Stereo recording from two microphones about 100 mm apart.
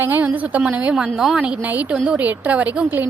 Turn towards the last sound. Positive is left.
turn(degrees=-15)  # may be behind; listen again after turning